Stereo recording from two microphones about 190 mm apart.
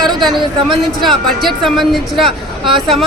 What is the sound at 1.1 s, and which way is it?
Speech, centre (ahead or behind).